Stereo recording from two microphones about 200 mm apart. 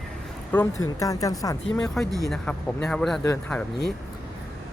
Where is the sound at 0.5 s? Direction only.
15° left (ahead or behind).